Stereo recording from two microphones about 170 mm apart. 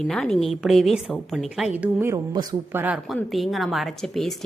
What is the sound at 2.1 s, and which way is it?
Speech, 25° right (ahead or behind).